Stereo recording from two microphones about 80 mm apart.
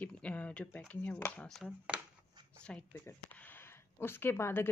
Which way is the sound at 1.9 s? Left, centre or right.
Centre.